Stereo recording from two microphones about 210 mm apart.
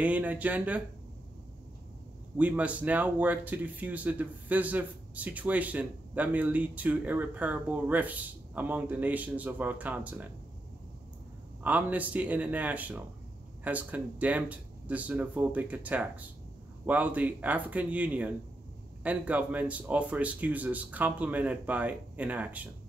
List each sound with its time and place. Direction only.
0.0 s speech: 5° right (ahead or behind)
2.3 s speech: 5° right (ahead or behind)
11.6 s speech: 5° right (ahead or behind)